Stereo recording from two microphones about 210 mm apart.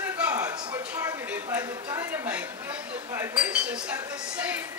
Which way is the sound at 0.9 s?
10° right (ahead or behind).